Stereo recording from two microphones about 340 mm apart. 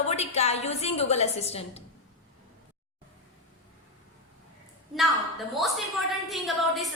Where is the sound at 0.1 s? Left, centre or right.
Centre.